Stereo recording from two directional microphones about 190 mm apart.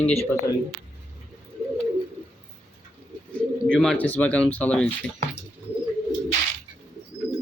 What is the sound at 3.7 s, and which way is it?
Speech, 5° left (ahead or behind).